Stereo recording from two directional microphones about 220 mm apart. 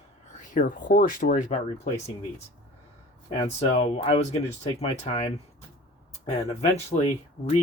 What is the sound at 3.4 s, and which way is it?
Speech, 25° left (ahead or behind).